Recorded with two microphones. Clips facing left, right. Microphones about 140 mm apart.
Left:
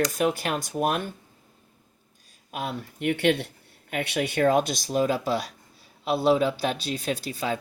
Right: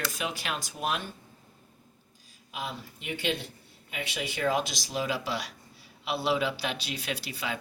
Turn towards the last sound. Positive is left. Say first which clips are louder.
# left 6 dB
turn(degrees=45)  # may be behind; listen again after turning